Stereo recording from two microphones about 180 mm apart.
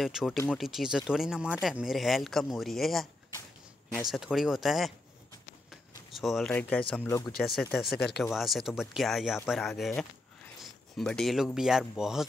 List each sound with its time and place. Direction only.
0.0 s speech: centre (ahead or behind)
4.1 s speech: centre (ahead or behind)
5.7 s a sound: centre (ahead or behind)
6.9 s speech: 15° left (ahead or behind)
7.3 s speech: centre (ahead or behind)